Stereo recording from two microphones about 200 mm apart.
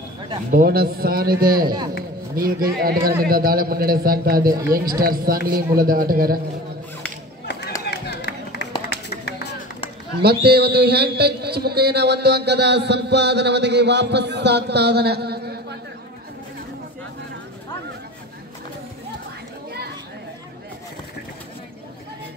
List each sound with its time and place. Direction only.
0.5 s a man's voice: 45° right (ahead or behind)
4.5 s speech: 15° right (ahead or behind)
5.0 s a man's voice: 45° right (ahead or behind)
7.8 s run: 55° left (ahead or behind)
10.2 s a man's voice: 55° right (ahead or behind)